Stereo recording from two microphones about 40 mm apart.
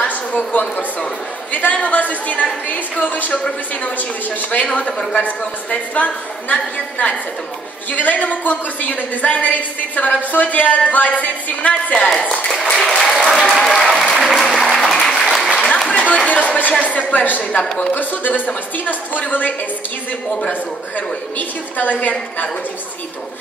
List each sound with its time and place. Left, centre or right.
0.5 s a woman's voice: left
5.7 s a woman's voice: left
12.5 s applause: centre
13.1 s applause: centre
15.9 s a sound: left
16.3 s chopping: left
16.8 s a woman's voice: left
21.4 s a woman's voice: left